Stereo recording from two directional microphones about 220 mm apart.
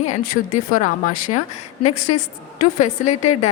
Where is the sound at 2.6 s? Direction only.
35° left (ahead or behind).